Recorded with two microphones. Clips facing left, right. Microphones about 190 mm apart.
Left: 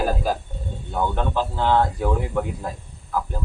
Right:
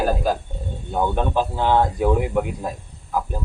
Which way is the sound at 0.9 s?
20° right (ahead or behind).